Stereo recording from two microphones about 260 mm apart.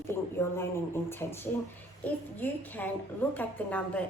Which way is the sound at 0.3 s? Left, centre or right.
Centre.